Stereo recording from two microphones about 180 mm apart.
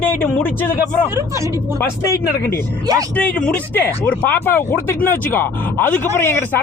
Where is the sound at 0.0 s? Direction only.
10° left (ahead or behind).